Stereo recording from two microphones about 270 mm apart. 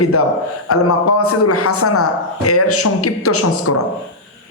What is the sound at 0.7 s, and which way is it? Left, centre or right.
A man's voice, left.